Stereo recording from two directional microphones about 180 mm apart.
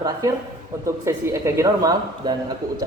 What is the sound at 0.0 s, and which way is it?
A man's voice, 20° right (ahead or behind).